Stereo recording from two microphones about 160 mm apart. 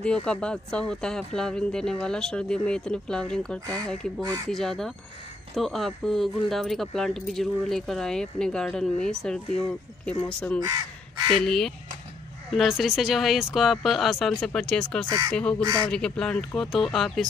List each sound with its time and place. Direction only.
0.0 s speech: 5° left (ahead or behind)
4.2 s speech: 25° right (ahead or behind)
4.5 s speech: centre (ahead or behind)
15.0 s speech: 20° right (ahead or behind)
15.9 s speech: 5° left (ahead or behind)